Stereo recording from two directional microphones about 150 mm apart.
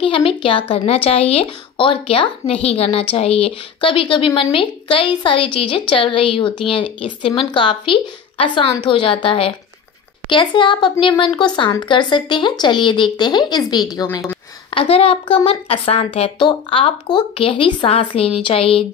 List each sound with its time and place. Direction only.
0.0 s speech: 35° left (ahead or behind); by 14.4 s 20° left (ahead or behind)
14.7 s speech: 40° left (ahead or behind)